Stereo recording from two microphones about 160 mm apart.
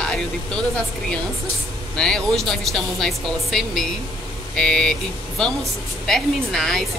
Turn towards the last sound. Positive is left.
turn(degrees=5)  # may be behind; listen again after turning